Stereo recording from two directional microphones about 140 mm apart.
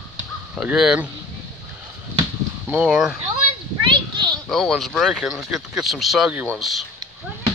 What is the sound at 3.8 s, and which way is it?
Children playing, 35° right (ahead or behind).